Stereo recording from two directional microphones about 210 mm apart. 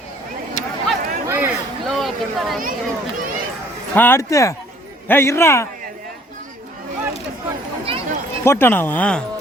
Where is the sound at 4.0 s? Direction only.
10° left (ahead or behind).